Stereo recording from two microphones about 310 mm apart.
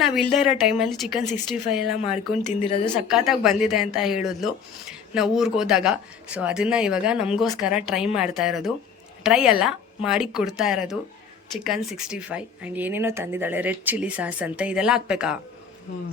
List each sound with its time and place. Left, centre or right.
0.0 s speech: centre
2.6 s a woman's voice: centre
3.1 s speech: centre